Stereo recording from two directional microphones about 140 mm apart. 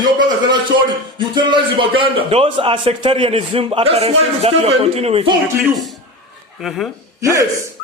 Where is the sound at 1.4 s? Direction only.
35° right (ahead or behind).